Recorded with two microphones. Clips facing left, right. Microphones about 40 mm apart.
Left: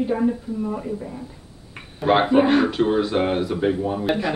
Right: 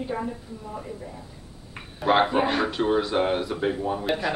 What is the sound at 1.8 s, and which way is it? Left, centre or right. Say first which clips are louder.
Speech: left 2 dB; centre.